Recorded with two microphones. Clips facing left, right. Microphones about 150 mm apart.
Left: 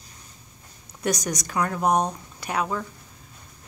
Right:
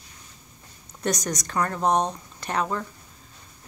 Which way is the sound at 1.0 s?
5° left (ahead or behind).